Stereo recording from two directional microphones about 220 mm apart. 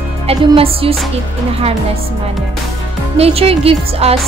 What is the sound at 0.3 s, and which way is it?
Speech, 25° right (ahead or behind).